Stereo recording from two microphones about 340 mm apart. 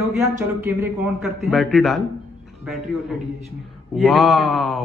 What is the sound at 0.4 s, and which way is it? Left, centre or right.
Speech, centre.